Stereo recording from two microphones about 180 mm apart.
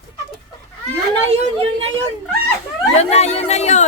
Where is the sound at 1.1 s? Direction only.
35° right (ahead or behind).